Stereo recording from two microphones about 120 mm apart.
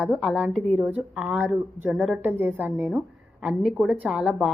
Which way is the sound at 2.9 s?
5° right (ahead or behind).